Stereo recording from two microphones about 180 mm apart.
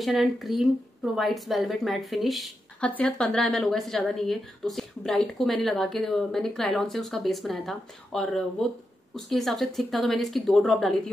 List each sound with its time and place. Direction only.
0.0 s a woman's voice: centre (ahead or behind)